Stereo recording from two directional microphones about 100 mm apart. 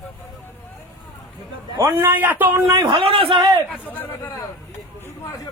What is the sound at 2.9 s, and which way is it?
Speech, 75° right (ahead or behind).